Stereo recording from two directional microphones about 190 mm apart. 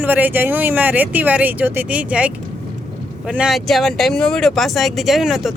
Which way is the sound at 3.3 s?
Centre (ahead or behind).